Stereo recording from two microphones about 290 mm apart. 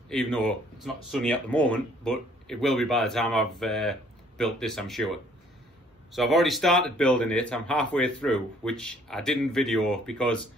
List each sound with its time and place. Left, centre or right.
0.1 s a man's voice: centre